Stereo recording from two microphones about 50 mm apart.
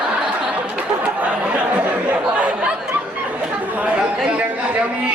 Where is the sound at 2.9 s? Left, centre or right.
Right.